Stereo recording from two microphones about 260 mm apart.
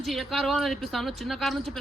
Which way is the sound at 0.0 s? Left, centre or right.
Centre.